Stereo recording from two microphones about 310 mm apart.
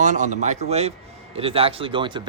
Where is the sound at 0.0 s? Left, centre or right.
Right.